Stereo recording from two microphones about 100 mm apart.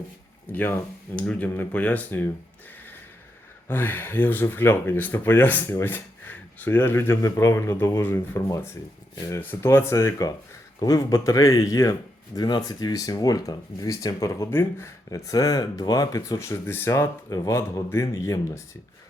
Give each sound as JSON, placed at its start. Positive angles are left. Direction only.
{"t": 0.5, "sound": "speech", "side_deg": 20}
{"t": 3.7, "sound": "speech", "side_deg": 20}
{"t": 9.4, "sound": "speech", "side_deg": 25}
{"t": 14.5, "sound": "speech", "side_deg": 20}
{"t": 15.1, "sound": "speech", "side_deg": 35}